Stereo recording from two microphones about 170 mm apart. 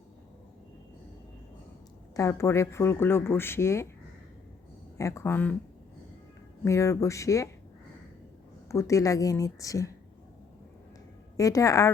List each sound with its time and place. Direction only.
2.1 s speech: 15° left (ahead or behind)
4.9 s speech: 15° left (ahead or behind)
6.7 s speech: 15° left (ahead or behind)
8.7 s a woman's voice: 20° left (ahead or behind)
11.3 s a woman's voice: 20° left (ahead or behind)